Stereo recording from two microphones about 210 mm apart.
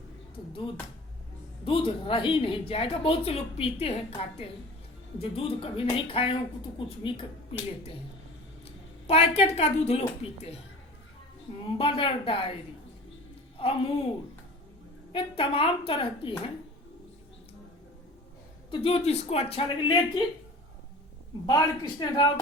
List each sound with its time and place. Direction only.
1.6 s speech: 25° left (ahead or behind)
8.6 s a woman's voice: 30° left (ahead or behind)
11.6 s speech: 25° left (ahead or behind)
13.6 s speech: 25° left (ahead or behind)
15.1 s speech: 25° left (ahead or behind)
18.7 s speech: 25° left (ahead or behind)
21.4 s speech: 20° left (ahead or behind)